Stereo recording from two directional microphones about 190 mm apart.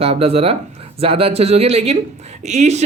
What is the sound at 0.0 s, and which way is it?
Speech, 30° right (ahead or behind).